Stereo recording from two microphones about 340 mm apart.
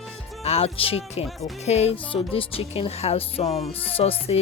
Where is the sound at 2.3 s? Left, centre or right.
Centre.